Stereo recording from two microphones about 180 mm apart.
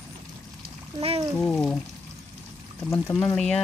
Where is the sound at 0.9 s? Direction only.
30° right (ahead or behind).